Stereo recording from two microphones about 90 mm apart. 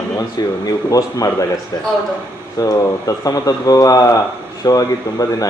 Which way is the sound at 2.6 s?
40° left (ahead or behind).